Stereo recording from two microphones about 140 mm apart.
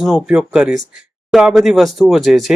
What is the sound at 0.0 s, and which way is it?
Speech, 5° right (ahead or behind).